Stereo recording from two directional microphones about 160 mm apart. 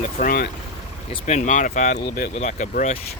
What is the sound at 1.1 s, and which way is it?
Speech, 45° left (ahead or behind).